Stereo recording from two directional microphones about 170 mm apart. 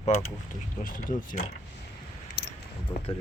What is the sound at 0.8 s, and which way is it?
Speech, 55° left (ahead or behind).